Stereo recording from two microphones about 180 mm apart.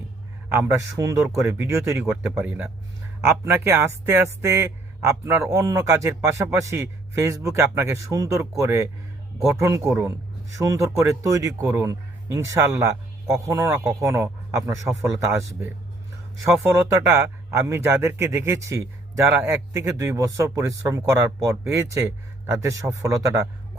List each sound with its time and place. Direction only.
0.5 s speech: 15° right (ahead or behind)
16.7 s speech: 15° right (ahead or behind)